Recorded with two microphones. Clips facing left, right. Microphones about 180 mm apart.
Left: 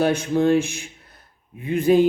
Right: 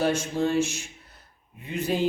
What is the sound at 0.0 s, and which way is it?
Speech, 60° left (ahead or behind).